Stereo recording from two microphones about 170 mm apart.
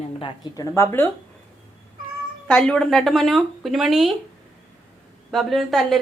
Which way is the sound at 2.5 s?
5° left (ahead or behind).